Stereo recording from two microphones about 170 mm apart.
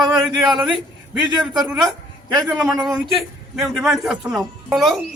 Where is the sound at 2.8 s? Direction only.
Centre (ahead or behind).